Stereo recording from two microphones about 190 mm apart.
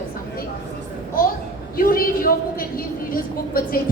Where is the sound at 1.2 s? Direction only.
50° left (ahead or behind).